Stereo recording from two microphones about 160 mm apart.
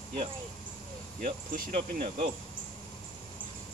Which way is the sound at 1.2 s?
55° right (ahead or behind).